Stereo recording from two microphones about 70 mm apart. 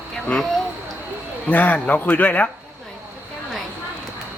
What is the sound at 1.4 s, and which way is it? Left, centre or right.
A man's voice, left.